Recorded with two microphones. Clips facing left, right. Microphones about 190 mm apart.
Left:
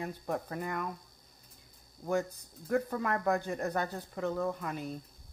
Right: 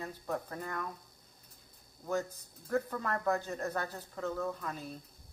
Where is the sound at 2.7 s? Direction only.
15° left (ahead or behind).